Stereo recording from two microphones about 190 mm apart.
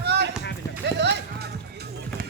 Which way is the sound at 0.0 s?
60° right (ahead or behind).